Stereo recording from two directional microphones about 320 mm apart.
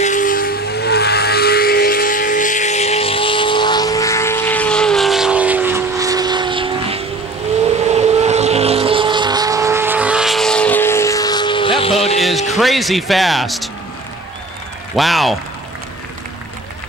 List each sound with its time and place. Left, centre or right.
0.0 s vehicle: left
12.2 s music: centre
12.5 s speech: centre
15.0 s speech: centre